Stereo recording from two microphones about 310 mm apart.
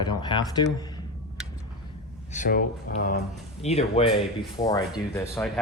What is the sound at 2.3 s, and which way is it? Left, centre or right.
Speech, left.